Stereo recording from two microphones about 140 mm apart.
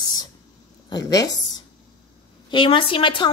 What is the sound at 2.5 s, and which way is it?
Speech, 35° left (ahead or behind).